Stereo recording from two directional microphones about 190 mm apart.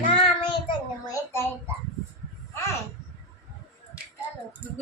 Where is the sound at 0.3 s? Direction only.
25° left (ahead or behind).